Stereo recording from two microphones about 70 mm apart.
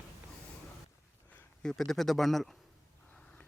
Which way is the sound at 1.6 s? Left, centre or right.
Centre.